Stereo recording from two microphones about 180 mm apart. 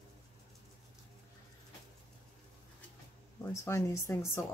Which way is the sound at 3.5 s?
15° left (ahead or behind).